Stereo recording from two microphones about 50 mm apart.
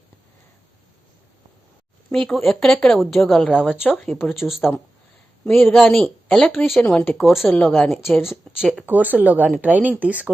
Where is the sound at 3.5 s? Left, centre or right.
Centre.